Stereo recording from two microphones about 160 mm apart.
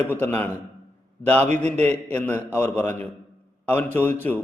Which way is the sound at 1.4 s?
45° right (ahead or behind).